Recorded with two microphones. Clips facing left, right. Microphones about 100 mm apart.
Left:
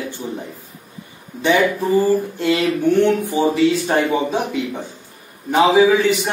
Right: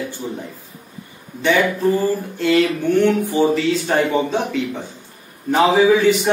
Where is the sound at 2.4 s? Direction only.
20° left (ahead or behind).